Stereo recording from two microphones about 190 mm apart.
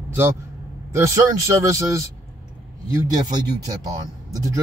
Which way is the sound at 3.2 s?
20° right (ahead or behind).